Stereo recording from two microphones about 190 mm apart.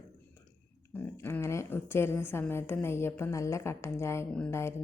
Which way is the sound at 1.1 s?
15° left (ahead or behind).